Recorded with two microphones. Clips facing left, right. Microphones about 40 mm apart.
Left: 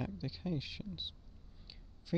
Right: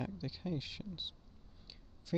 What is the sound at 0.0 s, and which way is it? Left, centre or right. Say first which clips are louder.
Speech: left 1 dB; centre.